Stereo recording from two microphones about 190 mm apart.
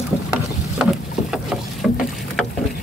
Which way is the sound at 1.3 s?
5° right (ahead or behind).